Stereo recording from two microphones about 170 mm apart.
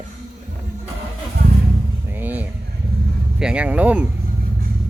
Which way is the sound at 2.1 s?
10° right (ahead or behind).